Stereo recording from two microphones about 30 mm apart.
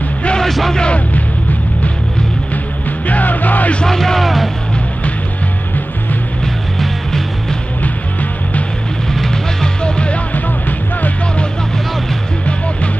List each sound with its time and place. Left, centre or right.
3.1 s music: left
3.8 s music: centre
4.2 s music: centre
7.8 s music: left
9.1 s music: centre
9.8 s music: left